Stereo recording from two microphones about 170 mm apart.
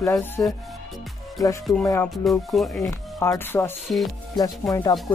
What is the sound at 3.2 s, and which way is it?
Speech, 15° left (ahead or behind).